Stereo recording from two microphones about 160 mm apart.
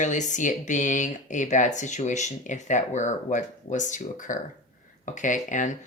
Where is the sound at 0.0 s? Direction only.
50° left (ahead or behind).